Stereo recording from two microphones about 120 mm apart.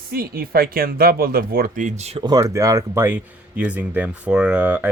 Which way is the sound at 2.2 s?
30° right (ahead or behind).